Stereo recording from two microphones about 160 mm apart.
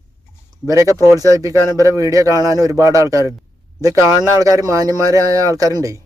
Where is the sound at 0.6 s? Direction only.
20° right (ahead or behind).